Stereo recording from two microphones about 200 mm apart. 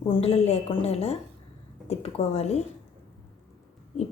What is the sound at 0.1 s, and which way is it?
Speech, 30° left (ahead or behind).